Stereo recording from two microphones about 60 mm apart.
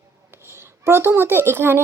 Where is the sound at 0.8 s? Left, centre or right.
Right.